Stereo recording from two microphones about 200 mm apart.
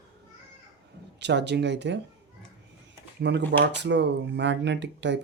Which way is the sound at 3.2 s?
60° right (ahead or behind).